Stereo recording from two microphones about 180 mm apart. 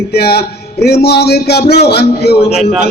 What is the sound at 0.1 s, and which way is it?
A man's voice, 60° left (ahead or behind).